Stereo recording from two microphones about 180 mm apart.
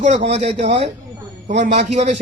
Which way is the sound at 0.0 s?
45° right (ahead or behind).